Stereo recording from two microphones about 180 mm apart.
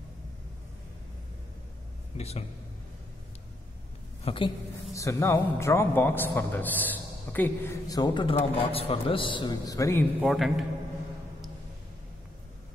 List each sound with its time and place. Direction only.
2.1 s speech: 35° left (ahead or behind)
4.2 s a woman's voice: 30° left (ahead or behind)
4.9 s a man's voice: 15° left (ahead or behind)
10.2 s a man's voice: centre (ahead or behind)